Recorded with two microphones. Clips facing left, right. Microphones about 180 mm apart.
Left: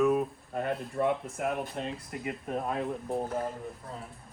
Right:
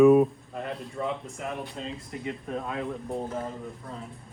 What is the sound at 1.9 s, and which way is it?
Speech, centre (ahead or behind).